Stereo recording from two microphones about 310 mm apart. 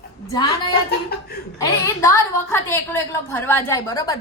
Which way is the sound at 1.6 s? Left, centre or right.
Centre.